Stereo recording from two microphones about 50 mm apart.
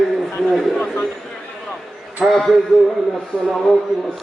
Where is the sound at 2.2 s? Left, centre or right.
Centre.